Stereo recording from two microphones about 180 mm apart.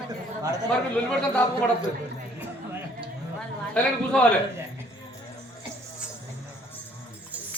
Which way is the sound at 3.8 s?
5° left (ahead or behind).